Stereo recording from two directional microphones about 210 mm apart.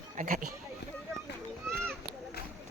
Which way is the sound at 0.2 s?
40° right (ahead or behind).